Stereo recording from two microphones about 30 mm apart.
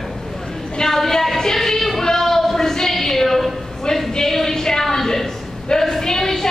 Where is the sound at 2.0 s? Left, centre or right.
Centre.